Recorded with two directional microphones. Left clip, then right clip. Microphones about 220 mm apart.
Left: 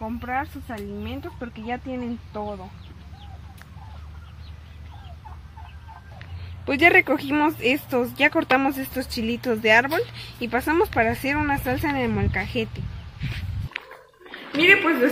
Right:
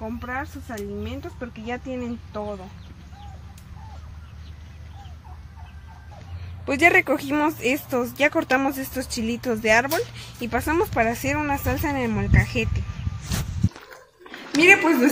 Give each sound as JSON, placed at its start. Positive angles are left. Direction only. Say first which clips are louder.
{"t": 0.0, "sound": "speech", "louder": "left 3 dB", "side_deg": -10}
{"t": 6.6, "sound": "speech", "louder": "left 1 dB", "side_deg": 0}
{"t": 14.6, "sound": "a woman's voice", "louder": "right 1 dB", "side_deg": -35}